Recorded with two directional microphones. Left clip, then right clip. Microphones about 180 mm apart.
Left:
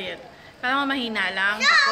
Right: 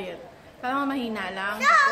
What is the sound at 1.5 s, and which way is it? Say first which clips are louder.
Speech: right 1 dB; 50° right (ahead or behind).